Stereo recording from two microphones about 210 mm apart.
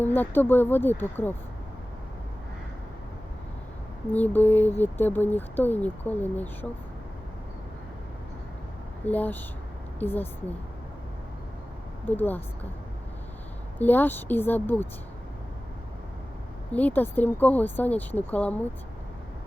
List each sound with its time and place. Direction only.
0.0 s speech: 10° left (ahead or behind)
4.1 s speech: 10° left (ahead or behind)
9.0 s speech: 10° left (ahead or behind)
12.0 s speech: 10° left (ahead or behind)
13.7 s speech: 10° left (ahead or behind)
16.7 s speech: 10° left (ahead or behind)